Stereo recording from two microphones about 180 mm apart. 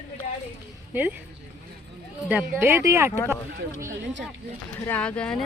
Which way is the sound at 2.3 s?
15° right (ahead or behind).